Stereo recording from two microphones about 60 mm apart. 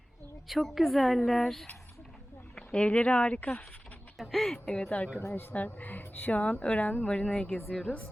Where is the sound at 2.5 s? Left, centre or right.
Centre.